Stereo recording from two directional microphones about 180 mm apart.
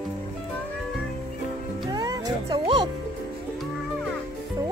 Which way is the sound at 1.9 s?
20° right (ahead or behind).